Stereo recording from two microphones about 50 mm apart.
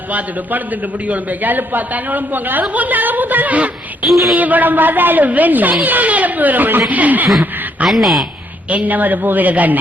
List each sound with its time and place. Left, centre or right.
0.1 s a woman's voice: right
4.0 s speech: centre
4.4 s a woman's voice: right
7.9 s speech: centre
8.7 s a woman's voice: right